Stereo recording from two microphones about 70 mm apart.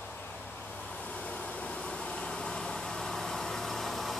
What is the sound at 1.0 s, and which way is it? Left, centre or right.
Vehicle, centre.